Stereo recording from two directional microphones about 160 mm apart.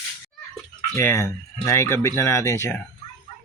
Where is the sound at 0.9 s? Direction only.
15° left (ahead or behind).